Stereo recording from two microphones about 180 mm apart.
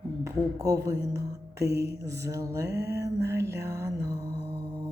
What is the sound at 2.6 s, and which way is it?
Music, 65° right (ahead or behind).